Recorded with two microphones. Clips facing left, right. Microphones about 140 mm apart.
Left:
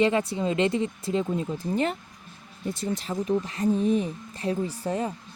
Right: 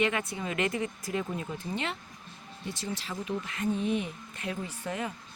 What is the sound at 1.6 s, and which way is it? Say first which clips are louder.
Speech: left 8 dB; 40° left (ahead or behind).